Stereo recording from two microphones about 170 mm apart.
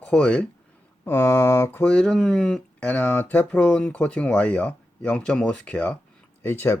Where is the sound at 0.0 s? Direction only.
5° left (ahead or behind).